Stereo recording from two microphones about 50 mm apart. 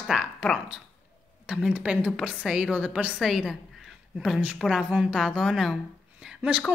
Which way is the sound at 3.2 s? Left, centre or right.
Centre.